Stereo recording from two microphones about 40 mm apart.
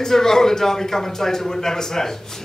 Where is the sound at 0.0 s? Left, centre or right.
Centre.